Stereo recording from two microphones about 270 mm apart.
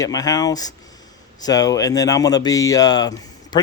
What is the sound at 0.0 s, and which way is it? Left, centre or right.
Speech, centre.